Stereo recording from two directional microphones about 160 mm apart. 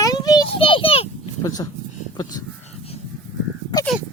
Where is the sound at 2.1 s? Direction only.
25° left (ahead or behind).